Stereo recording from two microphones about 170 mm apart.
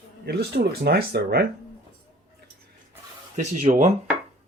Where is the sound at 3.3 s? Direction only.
50° right (ahead or behind).